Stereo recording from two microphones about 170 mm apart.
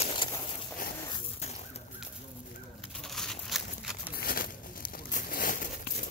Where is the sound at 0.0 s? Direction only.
30° left (ahead or behind).